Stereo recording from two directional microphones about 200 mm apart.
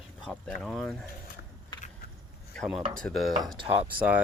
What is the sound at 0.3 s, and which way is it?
Speech, 5° left (ahead or behind).